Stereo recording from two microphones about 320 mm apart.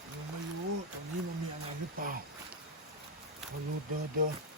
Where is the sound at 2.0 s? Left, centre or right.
Right.